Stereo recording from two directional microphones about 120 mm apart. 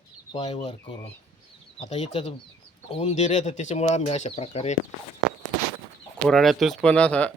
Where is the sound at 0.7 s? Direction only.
50° left (ahead or behind); by 4.8 s 70° left (ahead or behind).